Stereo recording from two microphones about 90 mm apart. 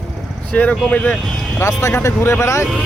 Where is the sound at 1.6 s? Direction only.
30° left (ahead or behind).